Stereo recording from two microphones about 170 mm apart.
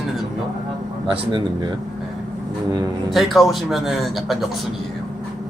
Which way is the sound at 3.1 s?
Centre (ahead or behind).